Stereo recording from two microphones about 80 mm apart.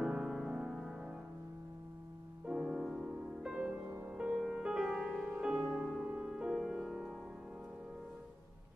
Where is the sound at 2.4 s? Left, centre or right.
Centre.